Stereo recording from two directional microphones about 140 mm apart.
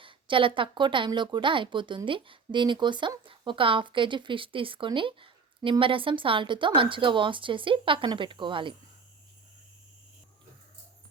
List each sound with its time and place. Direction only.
0.0 s speech: 40° right (ahead or behind)